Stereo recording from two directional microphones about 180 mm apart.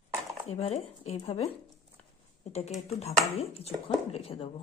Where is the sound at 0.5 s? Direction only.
35° left (ahead or behind).